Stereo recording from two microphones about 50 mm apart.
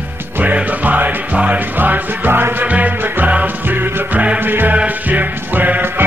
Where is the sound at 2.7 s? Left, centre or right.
Right.